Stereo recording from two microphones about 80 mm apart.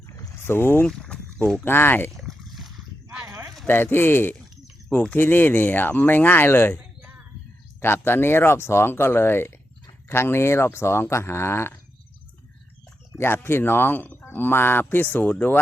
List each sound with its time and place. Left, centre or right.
0.4 s speech: left
0.9 s boat: centre
1.6 s speech: left
2.0 s a sound: centre
3.7 s speech: left
7.8 s speech: left
13.1 s speech: left